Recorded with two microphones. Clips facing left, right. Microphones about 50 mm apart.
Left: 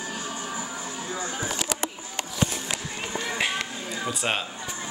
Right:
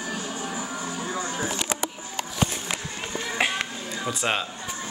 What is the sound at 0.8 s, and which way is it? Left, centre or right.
Music, right.